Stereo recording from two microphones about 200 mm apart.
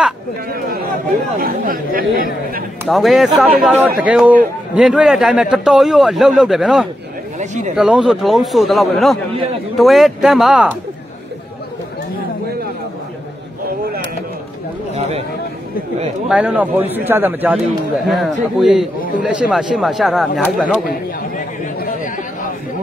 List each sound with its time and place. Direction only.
1.4 s speech: 45° right (ahead or behind)
2.9 s a man's voice: centre (ahead or behind)
7.3 s speech: 35° right (ahead or behind)
7.7 s a man's voice: 5° right (ahead or behind)
15.0 s a sound: 30° right (ahead or behind)
16.3 s a man's voice: 5° right (ahead or behind)
20.8 s chatter: 45° left (ahead or behind)